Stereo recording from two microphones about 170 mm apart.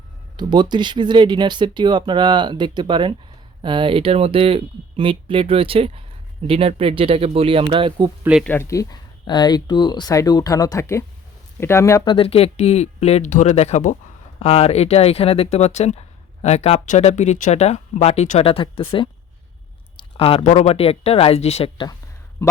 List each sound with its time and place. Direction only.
0.3 s speech: 25° right (ahead or behind)
8.2 s speech: 5° right (ahead or behind)
8.4 s speech: 15° left (ahead or behind)
12.1 s speech: 35° left (ahead or behind)
22.4 s speech: 15° left (ahead or behind)